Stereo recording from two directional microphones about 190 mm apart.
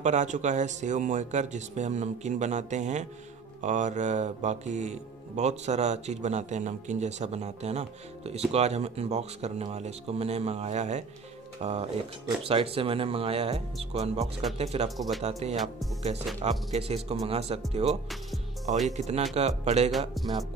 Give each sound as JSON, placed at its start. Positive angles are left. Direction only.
{"t": 0.0, "sound": "speech", "side_deg": -40}
{"t": 15.0, "sound": "speech", "side_deg": 0}
{"t": 15.2, "sound": "speech", "side_deg": -35}
{"t": 20.2, "sound": "speech", "side_deg": 0}